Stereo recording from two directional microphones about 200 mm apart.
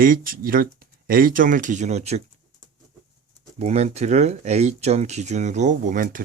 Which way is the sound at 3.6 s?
35° right (ahead or behind).